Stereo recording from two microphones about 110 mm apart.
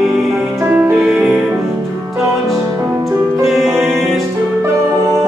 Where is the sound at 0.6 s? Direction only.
15° right (ahead or behind).